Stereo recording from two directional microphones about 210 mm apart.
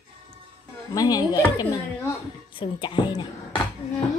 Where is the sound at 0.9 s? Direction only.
20° left (ahead or behind).